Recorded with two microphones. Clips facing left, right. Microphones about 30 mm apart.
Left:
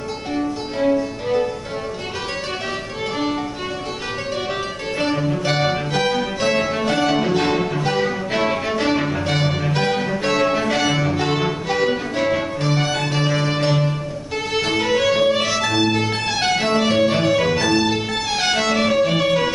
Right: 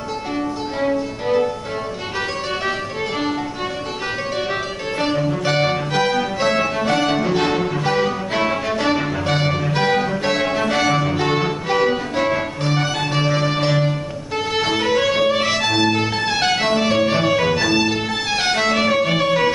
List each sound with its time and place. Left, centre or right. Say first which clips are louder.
0.7 s music: left 3 dB; centre
5.0 s music: right 1 dB; centre
15.4 s music: right 1 dB; right